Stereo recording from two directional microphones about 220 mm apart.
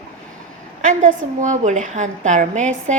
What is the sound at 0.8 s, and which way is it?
A woman's voice, 35° right (ahead or behind).